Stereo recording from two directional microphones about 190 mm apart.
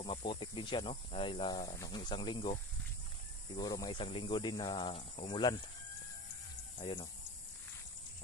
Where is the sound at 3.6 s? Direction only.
20° left (ahead or behind).